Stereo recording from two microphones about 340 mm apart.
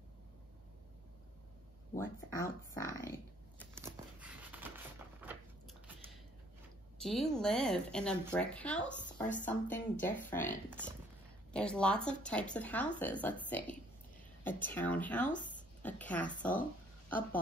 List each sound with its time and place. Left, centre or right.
2.0 s speech: centre
3.7 s a sound: centre
7.0 s a woman's voice: centre
11.5 s a woman's voice: centre
15.2 s speech: left
15.8 s speech: centre